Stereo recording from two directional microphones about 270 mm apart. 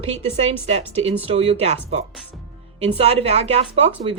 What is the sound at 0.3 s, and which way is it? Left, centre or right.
Speech, right.